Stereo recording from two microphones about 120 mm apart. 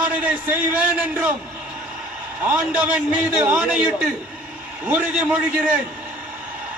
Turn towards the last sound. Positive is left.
turn(degrees=-10)  # may be behind; listen again after turning